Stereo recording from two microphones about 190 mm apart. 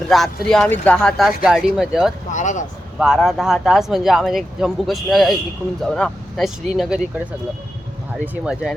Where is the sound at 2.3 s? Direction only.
40° left (ahead or behind).